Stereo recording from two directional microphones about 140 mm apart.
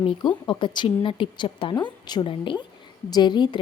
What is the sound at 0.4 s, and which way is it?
A woman's voice, 35° left (ahead or behind).